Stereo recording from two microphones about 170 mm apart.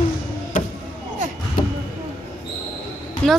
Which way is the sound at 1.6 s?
55° left (ahead or behind).